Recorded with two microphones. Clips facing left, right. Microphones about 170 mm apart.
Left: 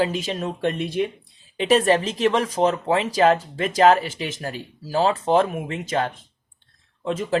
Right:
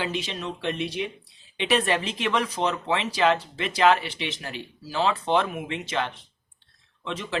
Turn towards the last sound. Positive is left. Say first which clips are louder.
# left 8 dB
turn(degrees=45)  # may be behind; listen again after turning